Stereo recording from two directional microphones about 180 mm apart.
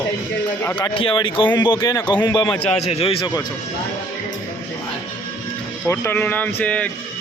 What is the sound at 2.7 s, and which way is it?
Speech, 35° left (ahead or behind).